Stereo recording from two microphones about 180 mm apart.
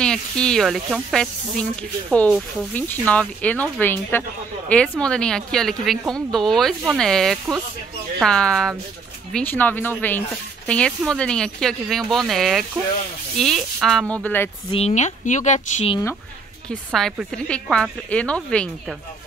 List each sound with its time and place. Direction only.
0.0 s a woman's voice: 5° left (ahead or behind)
14.7 s speech: 35° left (ahead or behind)
16.6 s a woman's voice: centre (ahead or behind)